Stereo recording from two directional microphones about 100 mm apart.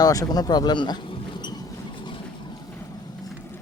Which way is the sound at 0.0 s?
40° left (ahead or behind).